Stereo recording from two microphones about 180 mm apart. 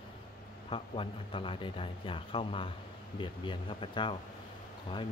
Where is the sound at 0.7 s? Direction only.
30° left (ahead or behind).